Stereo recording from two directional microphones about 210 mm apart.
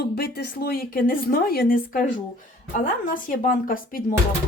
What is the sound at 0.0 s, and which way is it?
Speech, 45° left (ahead or behind).